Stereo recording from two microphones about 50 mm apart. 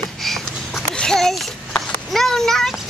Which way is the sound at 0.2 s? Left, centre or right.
Centre.